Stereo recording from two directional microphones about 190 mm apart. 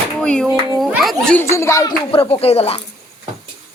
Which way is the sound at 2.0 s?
30° left (ahead or behind).